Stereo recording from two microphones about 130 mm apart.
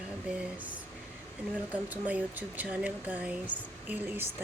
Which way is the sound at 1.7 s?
10° right (ahead or behind).